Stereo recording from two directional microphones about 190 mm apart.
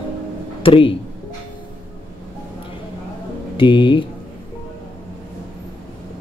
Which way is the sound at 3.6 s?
25° left (ahead or behind).